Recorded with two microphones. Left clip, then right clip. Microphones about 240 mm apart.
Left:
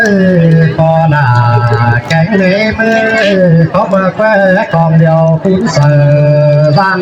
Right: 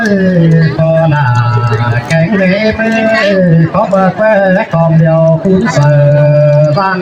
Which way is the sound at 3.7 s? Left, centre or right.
Left.